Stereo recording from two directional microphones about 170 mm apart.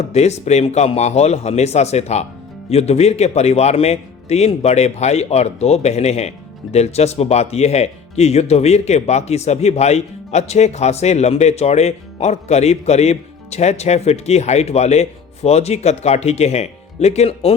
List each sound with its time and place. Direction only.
0.1 s a man's voice: 40° left (ahead or behind)